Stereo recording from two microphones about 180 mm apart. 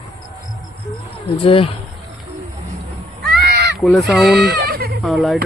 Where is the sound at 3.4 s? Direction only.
65° right (ahead or behind).